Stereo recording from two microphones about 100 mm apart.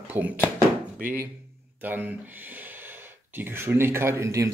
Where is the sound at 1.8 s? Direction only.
20° right (ahead or behind).